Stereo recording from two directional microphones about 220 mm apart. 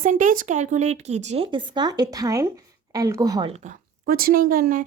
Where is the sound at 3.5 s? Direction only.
30° right (ahead or behind).